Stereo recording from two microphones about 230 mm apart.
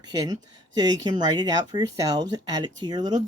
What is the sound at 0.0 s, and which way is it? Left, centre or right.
Speech, centre.